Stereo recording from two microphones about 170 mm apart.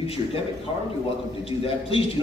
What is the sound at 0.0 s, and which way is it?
Speech, 35° left (ahead or behind).